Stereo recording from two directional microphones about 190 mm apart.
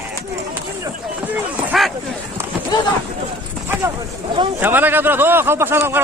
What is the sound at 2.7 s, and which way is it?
Speech, 20° left (ahead or behind).